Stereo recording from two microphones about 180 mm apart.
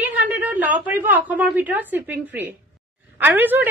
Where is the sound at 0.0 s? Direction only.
10° right (ahead or behind).